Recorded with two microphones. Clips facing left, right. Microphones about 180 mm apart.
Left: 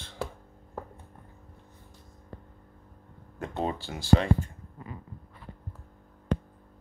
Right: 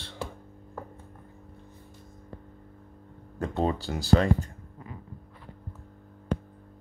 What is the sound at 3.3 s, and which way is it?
Speech, 40° right (ahead or behind).